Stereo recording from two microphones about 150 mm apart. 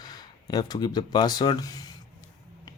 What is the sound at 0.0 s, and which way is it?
Speech, 25° left (ahead or behind).